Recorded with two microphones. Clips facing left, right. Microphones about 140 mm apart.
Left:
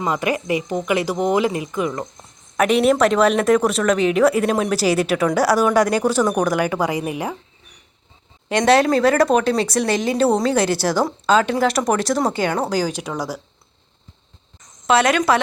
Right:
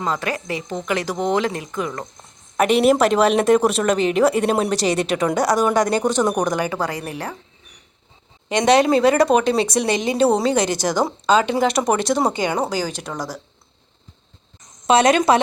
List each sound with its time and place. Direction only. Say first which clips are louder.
0.0 s speech: left 3 dB; 15° left (ahead or behind)
8.4 s speech: even; 5° left (ahead or behind)
14.8 s speech: right 2 dB; 20° right (ahead or behind)